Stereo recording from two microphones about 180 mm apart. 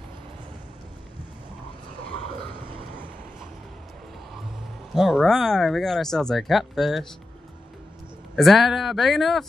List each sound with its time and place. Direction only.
4.9 s speech: centre (ahead or behind)
8.4 s speech: centre (ahead or behind)